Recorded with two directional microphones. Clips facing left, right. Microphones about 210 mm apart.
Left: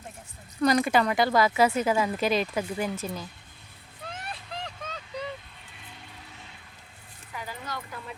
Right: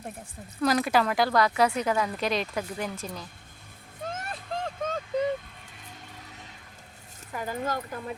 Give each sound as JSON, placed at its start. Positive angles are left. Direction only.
{"t": 0.6, "sound": "speech", "side_deg": 0}
{"t": 4.0, "sound": "vehicle", "side_deg": -45}
{"t": 7.3, "sound": "speech", "side_deg": -45}